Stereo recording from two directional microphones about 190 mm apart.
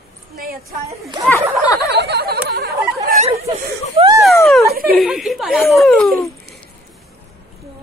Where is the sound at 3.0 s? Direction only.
35° right (ahead or behind).